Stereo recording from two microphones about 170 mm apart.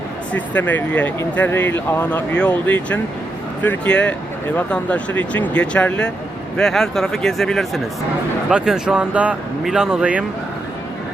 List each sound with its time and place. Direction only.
0.3 s speech: 10° left (ahead or behind); by 10.2 s 10° right (ahead or behind)